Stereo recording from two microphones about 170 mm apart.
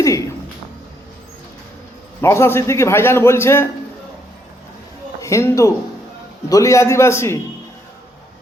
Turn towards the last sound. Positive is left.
turn(degrees=15)  # may be behind; listen again after turning